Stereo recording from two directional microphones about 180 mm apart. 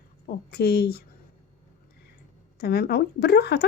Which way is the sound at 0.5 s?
65° left (ahead or behind).